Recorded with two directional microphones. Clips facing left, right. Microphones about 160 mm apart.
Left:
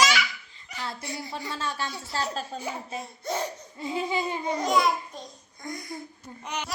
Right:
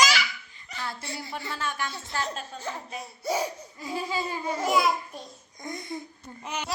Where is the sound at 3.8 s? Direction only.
20° left (ahead or behind).